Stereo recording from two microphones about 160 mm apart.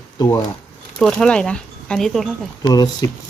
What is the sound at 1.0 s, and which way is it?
Speech, 5° left (ahead or behind).